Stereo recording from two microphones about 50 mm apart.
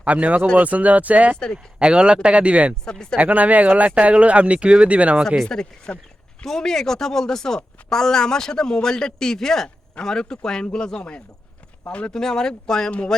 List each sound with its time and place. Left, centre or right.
0.0 s speech: right
1.8 s speech: centre
2.8 s a woman's voice: centre
3.2 s speech: right
5.4 s a woman's voice: centre